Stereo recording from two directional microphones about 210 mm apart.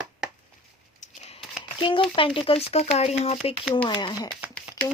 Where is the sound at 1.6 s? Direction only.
25° left (ahead or behind).